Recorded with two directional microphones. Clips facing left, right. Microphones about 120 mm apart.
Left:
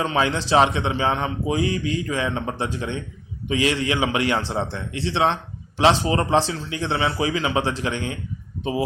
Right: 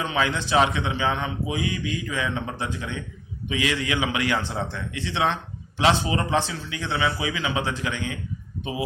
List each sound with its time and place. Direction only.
0.0 s a man's voice: 30° left (ahead or behind)